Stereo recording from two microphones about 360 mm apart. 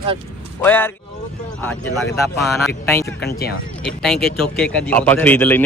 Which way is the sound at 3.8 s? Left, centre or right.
Centre.